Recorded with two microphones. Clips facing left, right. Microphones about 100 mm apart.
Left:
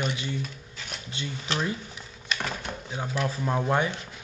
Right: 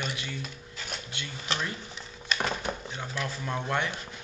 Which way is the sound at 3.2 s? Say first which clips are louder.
Left 6 dB; 5° left (ahead or behind).